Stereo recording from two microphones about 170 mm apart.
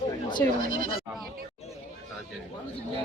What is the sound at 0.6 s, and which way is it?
Speech, 55° right (ahead or behind).